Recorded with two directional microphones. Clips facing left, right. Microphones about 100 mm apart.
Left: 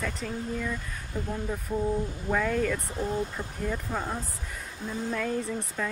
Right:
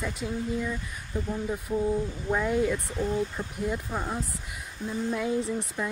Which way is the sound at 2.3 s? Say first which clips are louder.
Right 1 dB; 15° right (ahead or behind).